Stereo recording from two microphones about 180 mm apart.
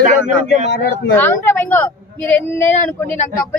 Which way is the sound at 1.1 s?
10° left (ahead or behind).